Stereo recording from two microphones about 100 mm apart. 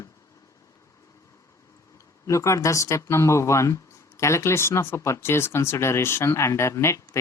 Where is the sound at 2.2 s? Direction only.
30° left (ahead or behind).